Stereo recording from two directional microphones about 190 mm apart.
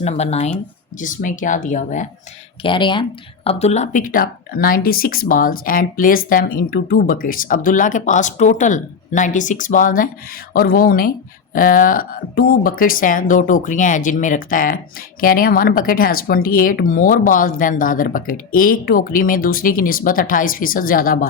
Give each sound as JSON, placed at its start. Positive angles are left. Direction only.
{"t": 0.0, "sound": "speech", "side_deg": 35}
{"t": 2.6, "sound": "speech", "side_deg": 25}